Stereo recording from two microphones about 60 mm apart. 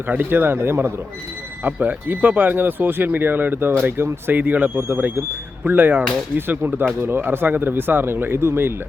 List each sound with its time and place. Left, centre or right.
0.1 s speech: right
4.4 s speech: right